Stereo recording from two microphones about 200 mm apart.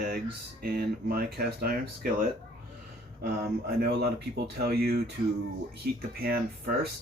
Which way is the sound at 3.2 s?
50° right (ahead or behind).